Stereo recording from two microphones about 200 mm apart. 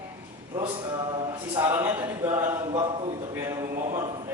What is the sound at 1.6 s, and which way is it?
A man's voice, 10° right (ahead or behind).